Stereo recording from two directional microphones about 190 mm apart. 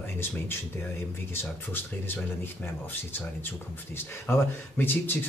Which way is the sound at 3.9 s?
10° left (ahead or behind).